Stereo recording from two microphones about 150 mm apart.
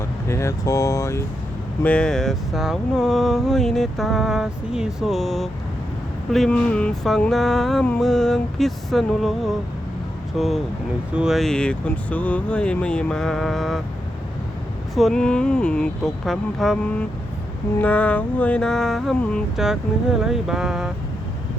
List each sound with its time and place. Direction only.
0.3 s speech: 20° left (ahead or behind)
1.8 s speech: 5° left (ahead or behind)
14.9 s speech: centre (ahead or behind)